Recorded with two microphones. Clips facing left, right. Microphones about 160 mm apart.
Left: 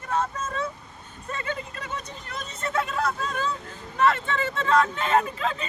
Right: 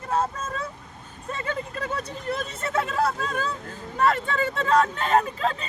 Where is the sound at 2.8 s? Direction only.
35° right (ahead or behind).